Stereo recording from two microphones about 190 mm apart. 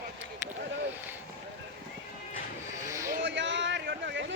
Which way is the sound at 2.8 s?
15° right (ahead or behind).